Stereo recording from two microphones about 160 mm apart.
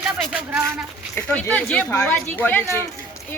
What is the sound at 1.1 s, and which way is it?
Speech, 10° left (ahead or behind).